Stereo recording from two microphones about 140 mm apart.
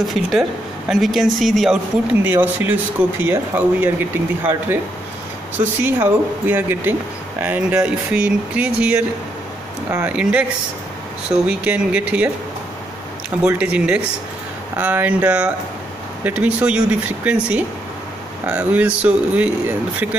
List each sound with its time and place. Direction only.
0.1 s speech: centre (ahead or behind)
2.2 s speech: 15° right (ahead or behind)
5.8 s speech: 15° right (ahead or behind)
13.4 s speech: 10° right (ahead or behind)